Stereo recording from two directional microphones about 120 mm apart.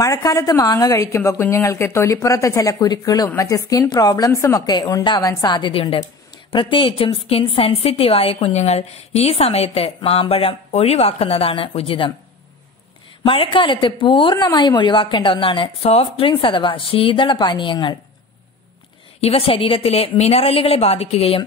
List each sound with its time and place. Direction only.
0.0 s a woman's voice: 30° left (ahead or behind); by 12.1 s 50° left (ahead or behind)
13.2 s a woman's voice: 45° left (ahead or behind)
19.2 s a woman's voice: 50° left (ahead or behind)